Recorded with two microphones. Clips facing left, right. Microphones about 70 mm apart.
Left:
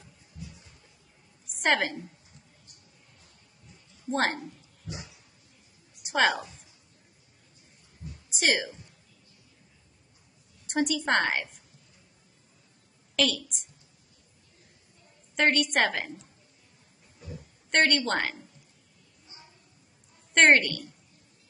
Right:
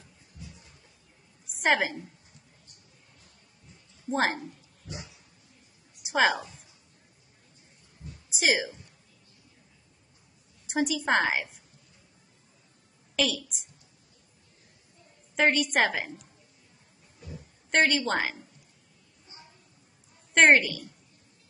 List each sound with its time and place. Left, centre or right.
1.6 s a woman's voice: centre
4.1 s a woman's voice: centre
6.0 s a woman's voice: centre
8.3 s speech: centre
10.7 s a woman's voice: centre
13.1 s a woman's voice: centre
15.3 s a woman's voice: centre
17.2 s a sound: left
17.6 s a woman's voice: centre
20.3 s a woman's voice: centre